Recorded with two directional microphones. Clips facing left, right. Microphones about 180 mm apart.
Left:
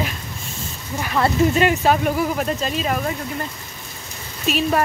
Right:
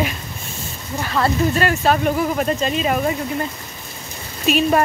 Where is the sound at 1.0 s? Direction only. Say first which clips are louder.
Left 1 dB; 15° left (ahead or behind).